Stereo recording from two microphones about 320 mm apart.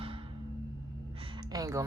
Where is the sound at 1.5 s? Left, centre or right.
Centre.